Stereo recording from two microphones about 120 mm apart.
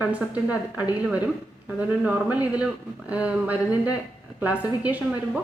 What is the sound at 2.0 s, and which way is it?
A woman's voice, 15° right (ahead or behind).